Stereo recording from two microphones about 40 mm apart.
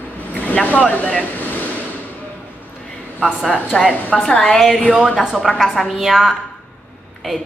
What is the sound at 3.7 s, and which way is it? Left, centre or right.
Speech, centre.